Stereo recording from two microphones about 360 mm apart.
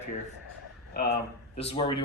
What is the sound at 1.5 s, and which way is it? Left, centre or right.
Speech, centre.